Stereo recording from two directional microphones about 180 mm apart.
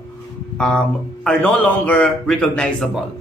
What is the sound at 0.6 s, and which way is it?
Speech, 5° left (ahead or behind).